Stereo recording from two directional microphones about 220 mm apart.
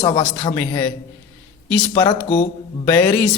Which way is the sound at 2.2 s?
30° left (ahead or behind).